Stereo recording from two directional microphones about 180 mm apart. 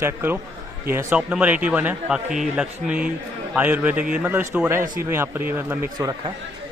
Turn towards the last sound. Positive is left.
turn(degrees=-25)  # may be behind; listen again after turning